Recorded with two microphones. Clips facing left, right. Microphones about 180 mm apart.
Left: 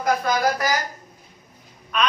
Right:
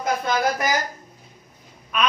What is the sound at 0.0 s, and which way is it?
Speech, 25° right (ahead or behind).